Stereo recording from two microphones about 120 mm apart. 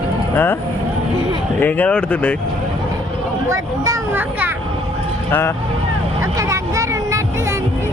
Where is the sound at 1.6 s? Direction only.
15° left (ahead or behind).